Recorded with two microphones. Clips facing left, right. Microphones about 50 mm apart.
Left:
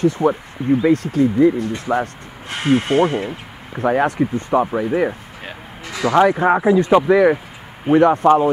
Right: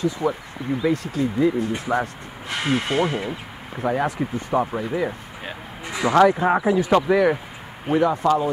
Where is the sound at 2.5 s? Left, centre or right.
Centre.